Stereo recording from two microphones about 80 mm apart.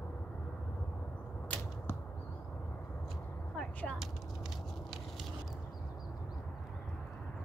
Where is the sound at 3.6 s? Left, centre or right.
Centre.